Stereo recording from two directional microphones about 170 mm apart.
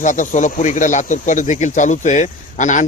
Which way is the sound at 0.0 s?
45° left (ahead or behind).